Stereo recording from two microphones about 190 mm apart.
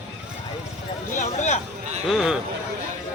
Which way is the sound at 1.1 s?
35° left (ahead or behind).